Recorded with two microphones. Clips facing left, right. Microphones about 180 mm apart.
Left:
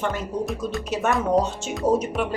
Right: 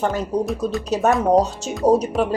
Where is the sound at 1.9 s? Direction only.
35° right (ahead or behind).